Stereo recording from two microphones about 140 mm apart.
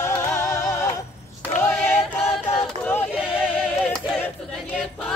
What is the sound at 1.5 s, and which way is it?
Choir, 10° left (ahead or behind).